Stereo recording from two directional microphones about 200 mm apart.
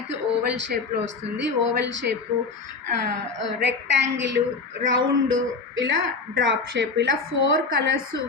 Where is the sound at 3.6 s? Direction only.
65° right (ahead or behind).